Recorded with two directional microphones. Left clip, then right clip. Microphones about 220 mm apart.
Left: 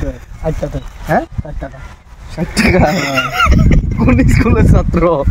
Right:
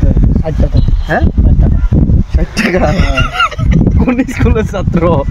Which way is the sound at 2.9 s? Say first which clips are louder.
Even; centre (ahead or behind).